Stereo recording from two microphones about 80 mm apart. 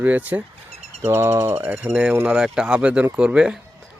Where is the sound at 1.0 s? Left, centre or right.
Right.